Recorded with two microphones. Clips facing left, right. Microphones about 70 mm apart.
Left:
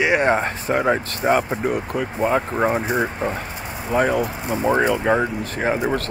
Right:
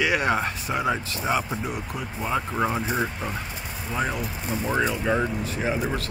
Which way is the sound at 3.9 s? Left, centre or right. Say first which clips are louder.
Left 9 dB; left.